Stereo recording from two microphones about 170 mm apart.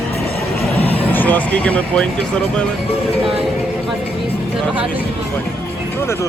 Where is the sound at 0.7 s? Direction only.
10° left (ahead or behind).